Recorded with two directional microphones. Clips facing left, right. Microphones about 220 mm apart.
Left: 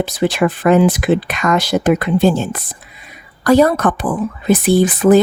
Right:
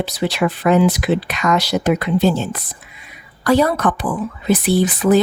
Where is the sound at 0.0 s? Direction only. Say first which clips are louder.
Left 4 dB; 50° left (ahead or behind).